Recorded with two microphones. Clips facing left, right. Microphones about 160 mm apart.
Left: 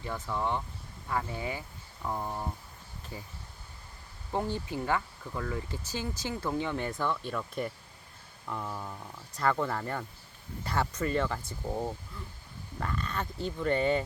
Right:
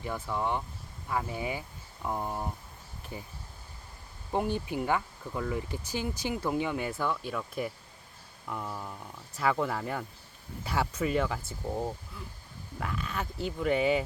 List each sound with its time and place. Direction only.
0.0 s speech: 10° right (ahead or behind)
4.3 s speech: 15° right (ahead or behind)